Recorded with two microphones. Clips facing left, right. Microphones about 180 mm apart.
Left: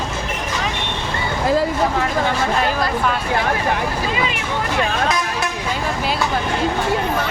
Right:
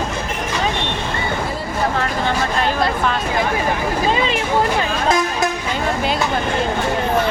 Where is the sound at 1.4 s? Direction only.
90° left.